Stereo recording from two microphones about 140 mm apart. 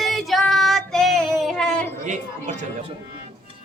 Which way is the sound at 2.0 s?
60° right (ahead or behind).